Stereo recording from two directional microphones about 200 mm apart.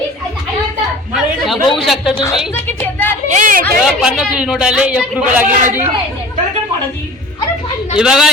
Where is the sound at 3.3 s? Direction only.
45° right (ahead or behind).